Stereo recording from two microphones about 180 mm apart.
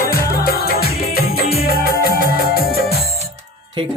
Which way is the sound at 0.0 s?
55° left (ahead or behind).